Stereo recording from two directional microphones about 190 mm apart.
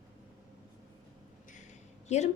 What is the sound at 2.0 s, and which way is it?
Speech, 35° left (ahead or behind).